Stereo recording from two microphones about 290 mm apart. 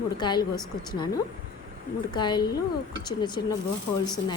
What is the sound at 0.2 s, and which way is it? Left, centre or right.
Speech, centre.